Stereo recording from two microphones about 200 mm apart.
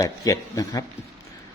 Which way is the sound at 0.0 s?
15° left (ahead or behind).